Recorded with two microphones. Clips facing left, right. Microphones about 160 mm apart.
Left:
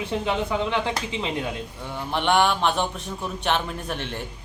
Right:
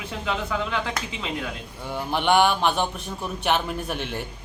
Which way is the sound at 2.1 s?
5° right (ahead or behind).